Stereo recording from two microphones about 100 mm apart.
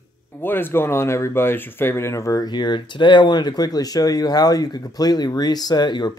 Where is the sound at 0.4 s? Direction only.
20° left (ahead or behind).